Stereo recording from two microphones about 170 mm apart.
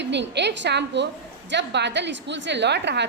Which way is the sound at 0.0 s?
90° right.